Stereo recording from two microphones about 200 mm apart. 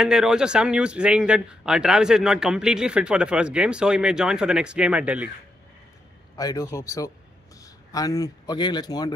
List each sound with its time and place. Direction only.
0.0 s a man's voice: 5° right (ahead or behind)
6.3 s a man's voice: 20° left (ahead or behind)